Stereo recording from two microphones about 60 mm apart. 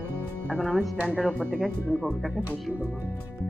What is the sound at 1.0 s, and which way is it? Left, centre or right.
Speech, right.